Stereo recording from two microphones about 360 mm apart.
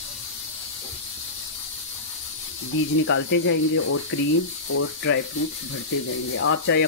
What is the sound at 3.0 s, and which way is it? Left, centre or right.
Speech, left.